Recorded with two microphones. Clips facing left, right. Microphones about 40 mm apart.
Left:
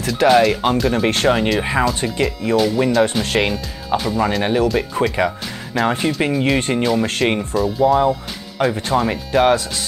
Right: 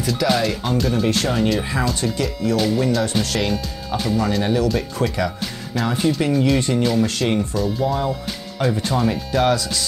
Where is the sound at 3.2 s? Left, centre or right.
Centre.